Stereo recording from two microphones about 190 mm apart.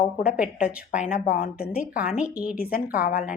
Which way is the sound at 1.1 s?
50° left (ahead or behind).